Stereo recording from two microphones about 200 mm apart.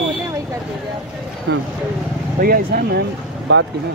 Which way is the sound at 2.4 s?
45° right (ahead or behind).